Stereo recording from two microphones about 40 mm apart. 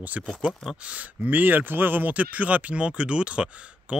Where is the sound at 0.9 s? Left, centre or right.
Right.